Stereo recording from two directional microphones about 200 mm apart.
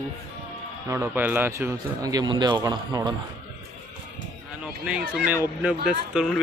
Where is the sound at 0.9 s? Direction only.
15° right (ahead or behind).